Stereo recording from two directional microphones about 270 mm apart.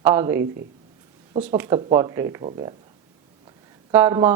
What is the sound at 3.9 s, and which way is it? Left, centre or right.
Speech, centre.